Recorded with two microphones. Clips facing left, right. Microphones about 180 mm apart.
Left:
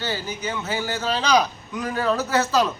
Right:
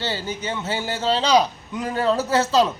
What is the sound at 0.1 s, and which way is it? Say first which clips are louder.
A man's voice: right 1 dB; 25° right (ahead or behind).